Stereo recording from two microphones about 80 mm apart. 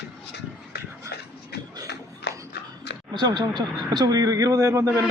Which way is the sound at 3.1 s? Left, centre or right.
Right.